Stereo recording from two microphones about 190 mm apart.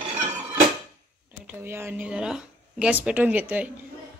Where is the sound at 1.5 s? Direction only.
10° right (ahead or behind).